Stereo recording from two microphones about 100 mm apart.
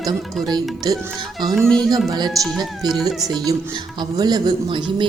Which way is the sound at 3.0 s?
40° right (ahead or behind).